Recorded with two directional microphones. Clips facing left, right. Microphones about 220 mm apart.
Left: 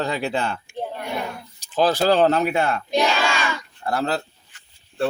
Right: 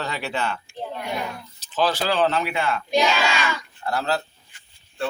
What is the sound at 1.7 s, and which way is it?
Speech, 45° left (ahead or behind).